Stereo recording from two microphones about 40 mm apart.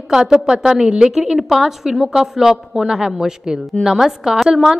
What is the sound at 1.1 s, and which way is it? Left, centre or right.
A woman's voice, centre.